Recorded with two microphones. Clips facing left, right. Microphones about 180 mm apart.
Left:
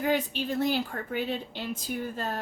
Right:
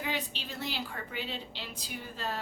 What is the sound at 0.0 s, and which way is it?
A woman's voice, 50° left (ahead or behind).